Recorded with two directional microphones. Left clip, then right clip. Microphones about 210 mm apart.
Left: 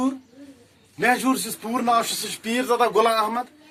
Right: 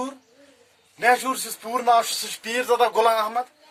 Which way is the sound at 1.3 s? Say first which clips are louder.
Left 2 dB; 35° right (ahead or behind).